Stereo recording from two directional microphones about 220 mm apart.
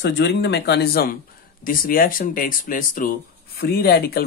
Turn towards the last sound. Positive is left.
turn(degrees=45)  # may be behind; listen again after turning